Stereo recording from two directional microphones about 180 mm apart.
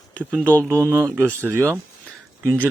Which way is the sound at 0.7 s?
15° right (ahead or behind).